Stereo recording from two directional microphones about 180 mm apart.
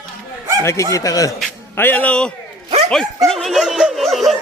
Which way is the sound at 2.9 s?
5° left (ahead or behind).